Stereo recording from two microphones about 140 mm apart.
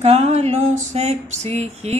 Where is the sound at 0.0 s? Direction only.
50° right (ahead or behind).